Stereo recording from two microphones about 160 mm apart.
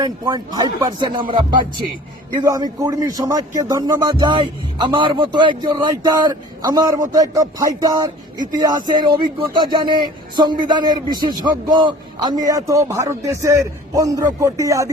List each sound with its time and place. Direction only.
0.0 s speech: 25° right (ahead or behind)